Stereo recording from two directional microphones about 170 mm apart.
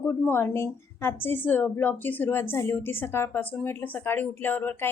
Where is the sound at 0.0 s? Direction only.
10° left (ahead or behind).